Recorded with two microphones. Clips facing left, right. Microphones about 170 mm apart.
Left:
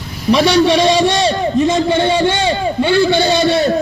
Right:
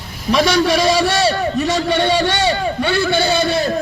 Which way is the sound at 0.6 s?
25° left (ahead or behind).